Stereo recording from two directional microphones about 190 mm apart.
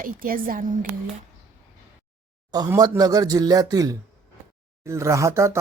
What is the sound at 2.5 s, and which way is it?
Speech, 20° right (ahead or behind).